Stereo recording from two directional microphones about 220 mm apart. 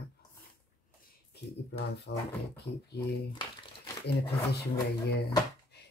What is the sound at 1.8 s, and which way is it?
Speech, 50° left (ahead or behind).